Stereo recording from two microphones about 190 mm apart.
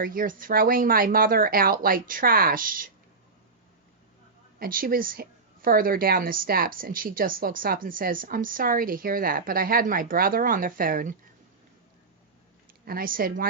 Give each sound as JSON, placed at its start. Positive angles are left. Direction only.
{"t": 0.0, "sound": "a woman's voice", "side_deg": -45}
{"t": 4.6, "sound": "a woman's voice", "side_deg": -50}
{"t": 12.8, "sound": "a woman's voice", "side_deg": -50}